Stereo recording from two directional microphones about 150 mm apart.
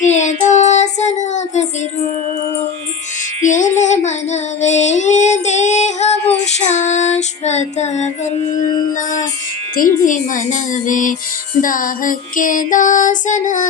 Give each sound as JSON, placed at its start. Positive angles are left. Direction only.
{"t": 0.0, "sound": "child singing", "side_deg": 50}
{"t": 3.4, "sound": "child singing", "side_deg": 55}
{"t": 8.9, "sound": "music", "side_deg": 60}
{"t": 9.7, "sound": "child singing", "side_deg": 65}